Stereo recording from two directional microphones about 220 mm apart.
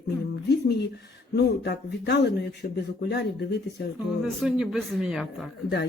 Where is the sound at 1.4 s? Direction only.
50° left (ahead or behind).